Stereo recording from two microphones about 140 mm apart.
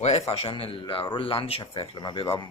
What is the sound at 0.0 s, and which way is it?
Speech, 50° left (ahead or behind).